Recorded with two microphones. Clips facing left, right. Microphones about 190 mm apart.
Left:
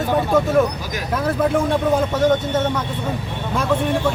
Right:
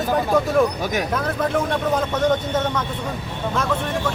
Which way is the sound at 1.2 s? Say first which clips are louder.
Left 3 dB; 10° left (ahead or behind).